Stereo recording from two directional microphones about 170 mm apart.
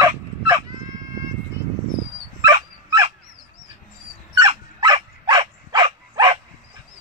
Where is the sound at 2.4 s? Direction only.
20° right (ahead or behind).